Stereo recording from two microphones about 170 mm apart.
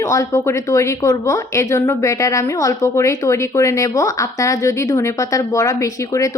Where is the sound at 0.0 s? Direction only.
20° left (ahead or behind).